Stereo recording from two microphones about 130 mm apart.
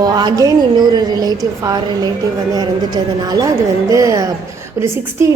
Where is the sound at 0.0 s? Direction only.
30° right (ahead or behind).